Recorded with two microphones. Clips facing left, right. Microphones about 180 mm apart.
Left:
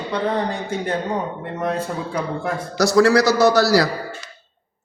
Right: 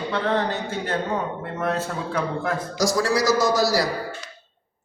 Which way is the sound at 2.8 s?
65° left (ahead or behind).